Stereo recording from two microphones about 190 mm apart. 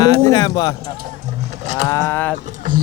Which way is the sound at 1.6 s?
40° right (ahead or behind).